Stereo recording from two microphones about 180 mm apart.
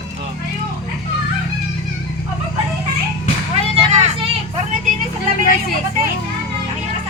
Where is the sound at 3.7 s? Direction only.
30° right (ahead or behind).